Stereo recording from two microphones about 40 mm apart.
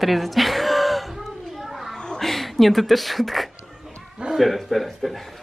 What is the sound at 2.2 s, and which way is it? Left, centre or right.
A man's voice, centre.